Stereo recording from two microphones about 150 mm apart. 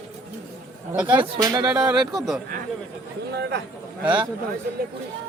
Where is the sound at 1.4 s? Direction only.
25° right (ahead or behind).